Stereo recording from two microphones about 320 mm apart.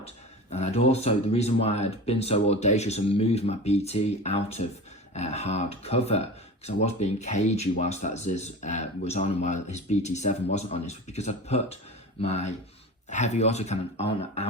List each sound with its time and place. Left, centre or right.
0.5 s speech: centre